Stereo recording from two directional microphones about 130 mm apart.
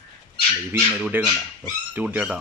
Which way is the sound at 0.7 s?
10° right (ahead or behind).